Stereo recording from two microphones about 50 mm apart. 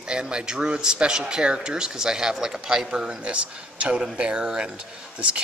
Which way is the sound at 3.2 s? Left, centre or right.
Right.